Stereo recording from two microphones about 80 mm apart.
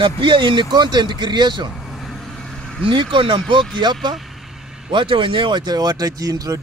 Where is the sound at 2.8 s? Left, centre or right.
Right.